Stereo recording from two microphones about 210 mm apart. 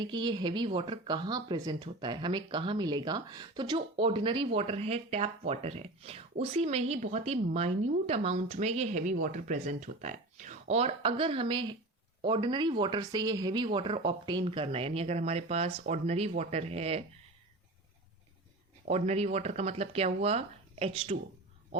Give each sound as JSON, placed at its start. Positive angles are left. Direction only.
{"t": 0.0, "sound": "a woman's voice", "side_deg": -20}
{"t": 18.9, "sound": "speech", "side_deg": -30}